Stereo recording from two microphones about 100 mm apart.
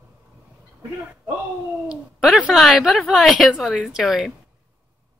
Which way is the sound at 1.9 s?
5° right (ahead or behind).